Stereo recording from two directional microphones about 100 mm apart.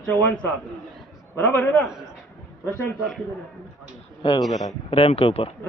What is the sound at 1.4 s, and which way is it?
Speech, 15° left (ahead or behind).